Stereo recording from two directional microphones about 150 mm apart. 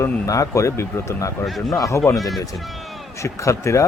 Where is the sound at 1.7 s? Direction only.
20° left (ahead or behind).